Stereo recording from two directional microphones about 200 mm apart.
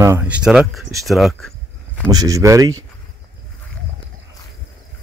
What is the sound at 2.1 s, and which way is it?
Speech, 15° right (ahead or behind).